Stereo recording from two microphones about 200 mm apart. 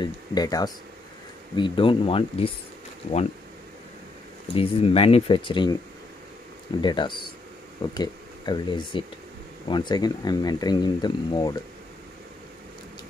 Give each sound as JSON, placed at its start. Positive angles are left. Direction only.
{"t": 0.0, "sound": "speech", "side_deg": 20}
{"t": 4.5, "sound": "speech", "side_deg": 30}
{"t": 6.8, "sound": "speech", "side_deg": 25}